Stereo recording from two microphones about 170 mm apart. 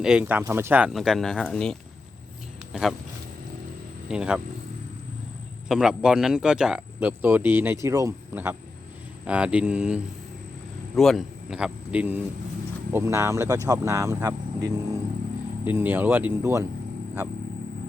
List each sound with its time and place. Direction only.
0.0 s speech: 5° right (ahead or behind)
0.9 s speech: centre (ahead or behind)
4.1 s speech: 5° right (ahead or behind)
5.6 s a man's voice: 5° right (ahead or behind)